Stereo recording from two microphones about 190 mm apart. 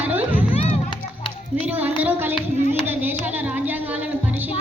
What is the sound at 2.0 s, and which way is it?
Music, 10° right (ahead or behind).